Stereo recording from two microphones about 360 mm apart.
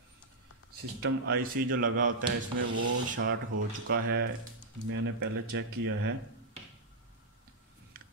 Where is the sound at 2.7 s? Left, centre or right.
Right.